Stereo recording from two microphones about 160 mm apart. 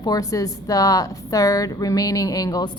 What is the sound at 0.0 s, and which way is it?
A woman's voice, 20° left (ahead or behind).